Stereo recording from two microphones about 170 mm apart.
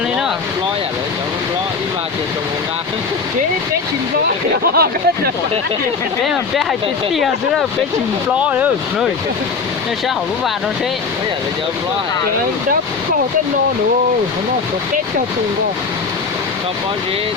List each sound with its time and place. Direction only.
4.7 s speech: 65° right (ahead or behind)
6.2 s speech: centre (ahead or behind)
8.4 s speech: 10° right (ahead or behind)